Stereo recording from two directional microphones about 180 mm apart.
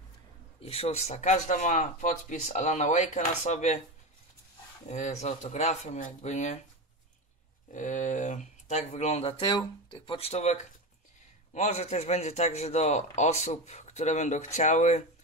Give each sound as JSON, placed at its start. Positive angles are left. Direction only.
{"t": 0.6, "sound": "a man's voice", "side_deg": 35}
{"t": 4.8, "sound": "a man's voice", "side_deg": 40}
{"t": 7.7, "sound": "a man's voice", "side_deg": 45}